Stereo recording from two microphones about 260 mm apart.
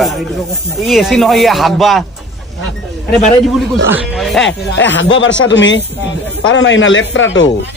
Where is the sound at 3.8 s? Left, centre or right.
Centre.